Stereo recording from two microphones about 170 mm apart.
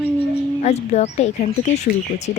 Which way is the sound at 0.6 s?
40° left (ahead or behind).